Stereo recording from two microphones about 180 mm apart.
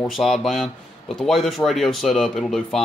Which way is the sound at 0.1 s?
Centre (ahead or behind).